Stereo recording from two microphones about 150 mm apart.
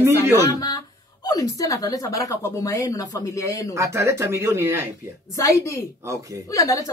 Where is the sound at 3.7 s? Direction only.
20° right (ahead or behind).